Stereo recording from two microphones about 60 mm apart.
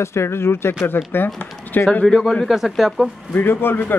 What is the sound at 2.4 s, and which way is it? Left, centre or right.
Speech, centre.